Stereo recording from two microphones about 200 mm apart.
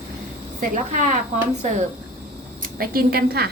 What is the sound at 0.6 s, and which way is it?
Speech, 40° right (ahead or behind).